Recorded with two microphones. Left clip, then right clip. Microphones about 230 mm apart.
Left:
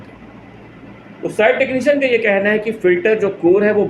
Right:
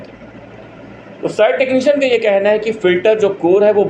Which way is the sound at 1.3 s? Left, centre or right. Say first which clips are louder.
Right 2 dB; centre.